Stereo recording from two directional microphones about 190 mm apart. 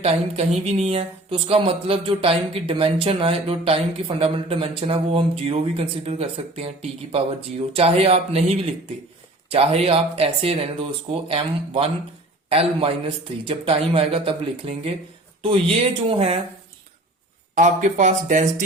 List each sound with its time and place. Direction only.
0.0 s speech: 30° right (ahead or behind)
9.5 s speech: 30° right (ahead or behind)
17.5 s speech: 40° right (ahead or behind)